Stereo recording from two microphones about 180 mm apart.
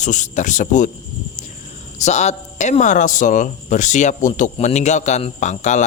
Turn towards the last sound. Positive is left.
turn(degrees=40)  # may be behind; listen again after turning